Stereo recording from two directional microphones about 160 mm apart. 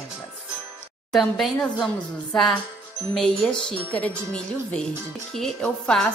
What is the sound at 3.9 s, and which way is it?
A woman's voice, 5° left (ahead or behind).